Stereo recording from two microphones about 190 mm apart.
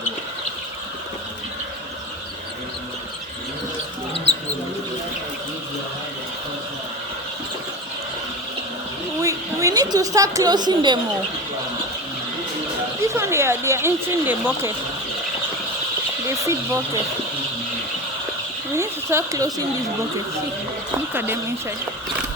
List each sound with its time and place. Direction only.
9.2 s a woman's voice: 15° right (ahead or behind)
13.1 s speech: 15° right (ahead or behind)
16.4 s speech: 15° right (ahead or behind)
18.8 s speech: 15° right (ahead or behind)
21.1 s speech: 10° right (ahead or behind)